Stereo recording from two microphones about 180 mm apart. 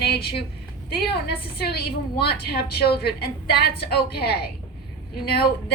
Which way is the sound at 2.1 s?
60° left (ahead or behind).